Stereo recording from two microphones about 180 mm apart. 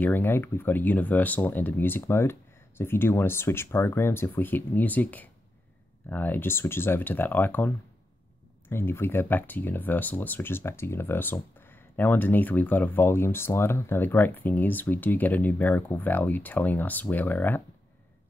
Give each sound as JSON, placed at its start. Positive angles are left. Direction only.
{"t": 0.0, "sound": "speech", "side_deg": 10}